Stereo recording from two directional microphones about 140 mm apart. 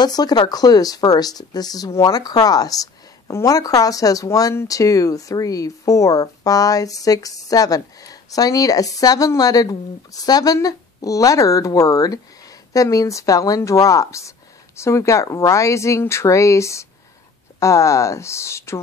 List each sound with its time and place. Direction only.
0.0 s a woman's voice: 30° left (ahead or behind)